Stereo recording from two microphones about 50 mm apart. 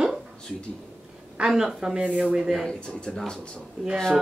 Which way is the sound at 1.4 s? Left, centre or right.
Centre.